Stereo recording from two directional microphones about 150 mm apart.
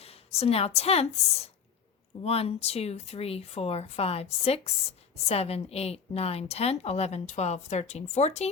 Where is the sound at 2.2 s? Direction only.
40° left (ahead or behind).